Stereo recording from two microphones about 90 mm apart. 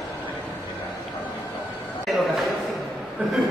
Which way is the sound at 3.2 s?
15° right (ahead or behind).